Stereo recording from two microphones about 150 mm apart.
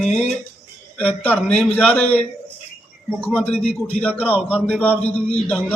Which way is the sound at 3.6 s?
40° left (ahead or behind).